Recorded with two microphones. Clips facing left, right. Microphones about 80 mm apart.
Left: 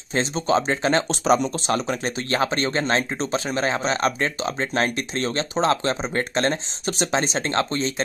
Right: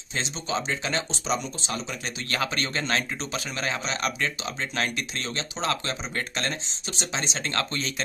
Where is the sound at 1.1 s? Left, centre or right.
Left.